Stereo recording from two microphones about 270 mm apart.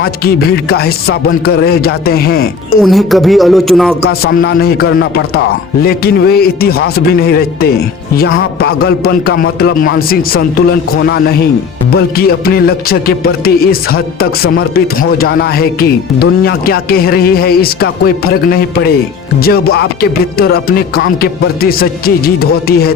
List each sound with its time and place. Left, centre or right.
0.0 s speech: left
2.8 s a man's voice: centre
4.0 s speech: left
11.9 s speech: left